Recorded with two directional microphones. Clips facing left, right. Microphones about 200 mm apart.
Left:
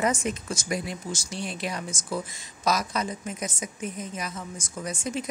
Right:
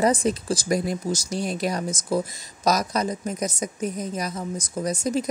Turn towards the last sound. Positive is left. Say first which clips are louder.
# right 7 dB
turn(degrees=-40)  # may be behind; listen again after turning